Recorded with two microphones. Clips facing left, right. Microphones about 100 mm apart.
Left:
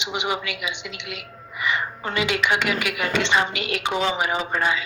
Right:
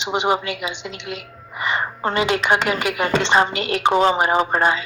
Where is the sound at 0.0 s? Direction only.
35° right (ahead or behind).